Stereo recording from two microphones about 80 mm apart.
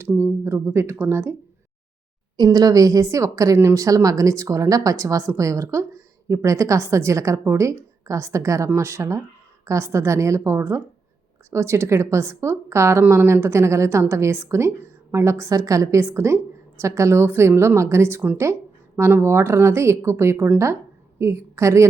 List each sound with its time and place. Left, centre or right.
0.2 s a woman's voice: right
2.3 s a woman's voice: right